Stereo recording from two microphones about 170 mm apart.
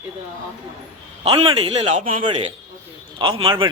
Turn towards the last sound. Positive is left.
turn(degrees=-30)  # may be behind; listen again after turning